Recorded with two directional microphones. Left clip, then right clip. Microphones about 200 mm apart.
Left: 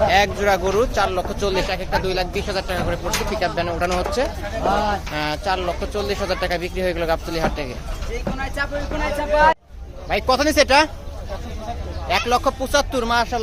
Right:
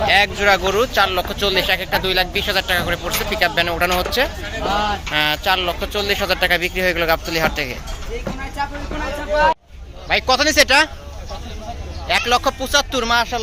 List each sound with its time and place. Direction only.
0.1 s speech: 10° left (ahead or behind)
4.7 s a sound: 50° left (ahead or behind)
5.1 s speech: centre (ahead or behind)
10.1 s speech: 10° left (ahead or behind)
12.0 s speech: 10° left (ahead or behind)